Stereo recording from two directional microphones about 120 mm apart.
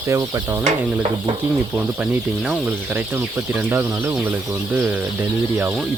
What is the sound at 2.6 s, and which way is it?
Speech, 15° right (ahead or behind).